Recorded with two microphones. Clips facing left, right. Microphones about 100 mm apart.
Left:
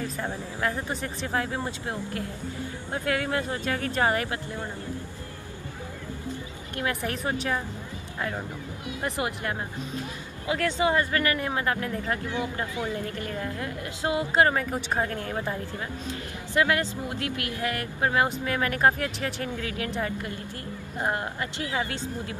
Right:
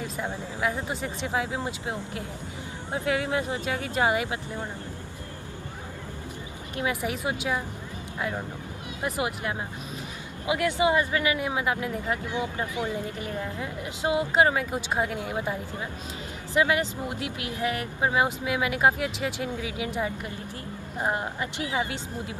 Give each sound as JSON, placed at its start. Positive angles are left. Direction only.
{"t": 0.0, "sound": "speech", "side_deg": -10}
{"t": 6.8, "sound": "speech", "side_deg": -10}
{"t": 9.2, "sound": "speech", "side_deg": -10}
{"t": 16.5, "sound": "speech", "side_deg": -15}
{"t": 21.0, "sound": "speech", "side_deg": -15}